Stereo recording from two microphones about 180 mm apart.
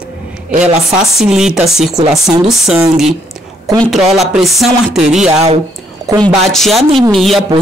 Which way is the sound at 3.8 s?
Centre (ahead or behind).